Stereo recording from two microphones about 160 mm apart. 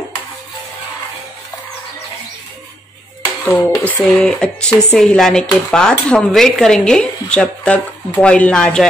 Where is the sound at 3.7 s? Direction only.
20° left (ahead or behind).